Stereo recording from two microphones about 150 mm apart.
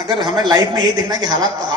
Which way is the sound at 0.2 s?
25° right (ahead or behind).